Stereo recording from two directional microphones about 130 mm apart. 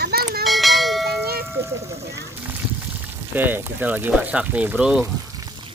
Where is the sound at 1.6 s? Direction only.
20° right (ahead or behind).